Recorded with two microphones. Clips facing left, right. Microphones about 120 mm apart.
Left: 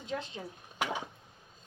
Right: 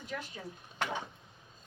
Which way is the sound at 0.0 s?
25° left (ahead or behind).